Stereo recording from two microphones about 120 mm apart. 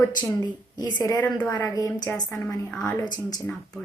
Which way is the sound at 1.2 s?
15° left (ahead or behind).